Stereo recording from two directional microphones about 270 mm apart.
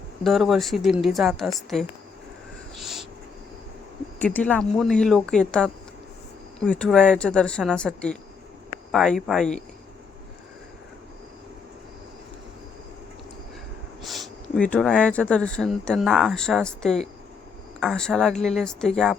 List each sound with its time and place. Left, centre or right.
0.3 s speech: centre
2.7 s a sound: centre
4.2 s speech: centre
14.0 s speech: centre